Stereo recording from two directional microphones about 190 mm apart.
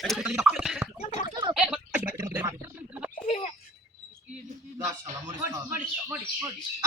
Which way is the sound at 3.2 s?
35° left (ahead or behind).